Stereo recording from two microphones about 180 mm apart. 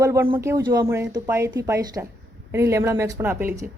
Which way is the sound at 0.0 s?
15° right (ahead or behind).